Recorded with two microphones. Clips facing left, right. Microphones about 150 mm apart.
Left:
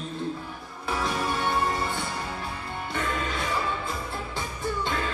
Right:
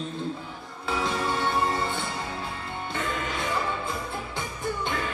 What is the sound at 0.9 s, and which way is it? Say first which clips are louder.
Music: right 1 dB; 20° right (ahead or behind).